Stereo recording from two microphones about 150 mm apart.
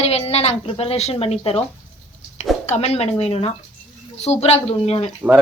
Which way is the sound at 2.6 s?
45° left (ahead or behind).